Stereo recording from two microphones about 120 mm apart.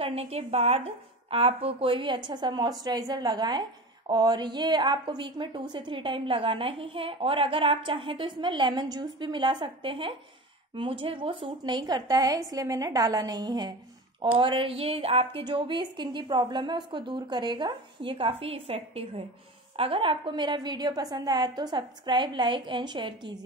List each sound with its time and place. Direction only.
0.0 s a woman's voice: 60° right (ahead or behind); by 23.4 s 40° right (ahead or behind)